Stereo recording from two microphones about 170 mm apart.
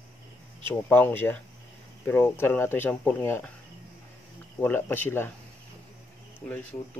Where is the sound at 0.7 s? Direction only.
10° left (ahead or behind).